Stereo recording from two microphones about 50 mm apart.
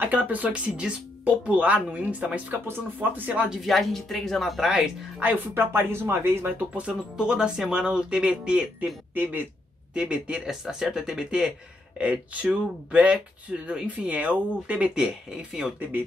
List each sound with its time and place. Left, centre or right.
0.0 s speech: right
3.6 s speech: centre
5.5 s speech: right
6.9 s speech: centre
9.1 s speech: right
9.9 s speech: right
10.4 s speech: centre
12.0 s speech: right
15.0 s speech: centre